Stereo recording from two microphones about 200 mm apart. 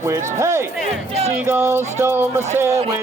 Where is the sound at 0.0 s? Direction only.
15° right (ahead or behind).